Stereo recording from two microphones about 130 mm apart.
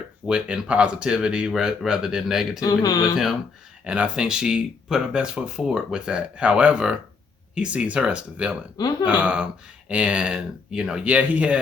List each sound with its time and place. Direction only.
0.3 s speech: 5° right (ahead or behind)
2.6 s speech: 30° left (ahead or behind)
3.8 s speech: 10° right (ahead or behind)